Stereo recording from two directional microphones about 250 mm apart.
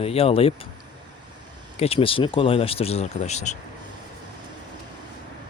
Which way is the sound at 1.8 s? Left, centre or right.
Left.